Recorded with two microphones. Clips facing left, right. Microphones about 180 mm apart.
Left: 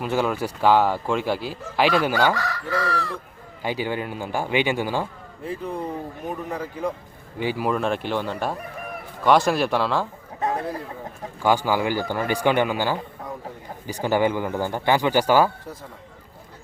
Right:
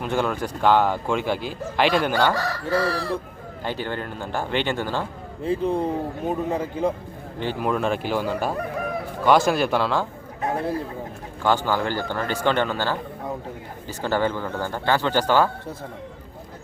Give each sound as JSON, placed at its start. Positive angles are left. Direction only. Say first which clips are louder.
{"t": 0.0, "sound": "speech", "louder": "left 1 dB", "side_deg": 5}
{"t": 2.3, "sound": "fowl", "louder": "right 3 dB", "side_deg": -30}
{"t": 3.6, "sound": "speech", "louder": "left 2 dB", "side_deg": 10}
{"t": 5.5, "sound": "speech", "louder": "right 6 dB", "side_deg": -25}
{"t": 7.3, "sound": "speech", "louder": "left 1 dB", "side_deg": 5}
{"t": 8.5, "sound": "chicken", "louder": "right 7 dB", "side_deg": -90}
{"t": 9.2, "sound": "speech", "louder": "even", "side_deg": 0}
{"t": 11.4, "sound": "speech", "louder": "left 1 dB", "side_deg": 10}